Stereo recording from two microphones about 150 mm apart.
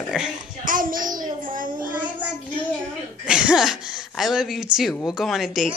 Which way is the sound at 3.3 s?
5° right (ahead or behind).